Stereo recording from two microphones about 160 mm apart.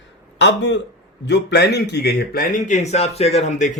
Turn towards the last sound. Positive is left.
turn(degrees=50)  # may be behind; listen again after turning